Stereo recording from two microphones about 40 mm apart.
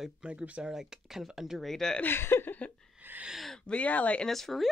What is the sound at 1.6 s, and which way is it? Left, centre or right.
Speech, centre.